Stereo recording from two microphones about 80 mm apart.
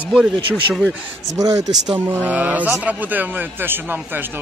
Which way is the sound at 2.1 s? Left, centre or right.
Centre.